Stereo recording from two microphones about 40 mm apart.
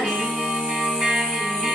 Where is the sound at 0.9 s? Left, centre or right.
Centre.